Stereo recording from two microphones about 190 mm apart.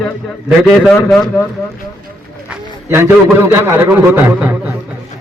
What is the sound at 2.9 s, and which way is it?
A man's voice, 10° right (ahead or behind).